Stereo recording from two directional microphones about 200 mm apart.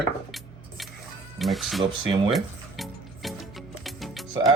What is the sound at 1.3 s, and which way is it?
Speech, centre (ahead or behind).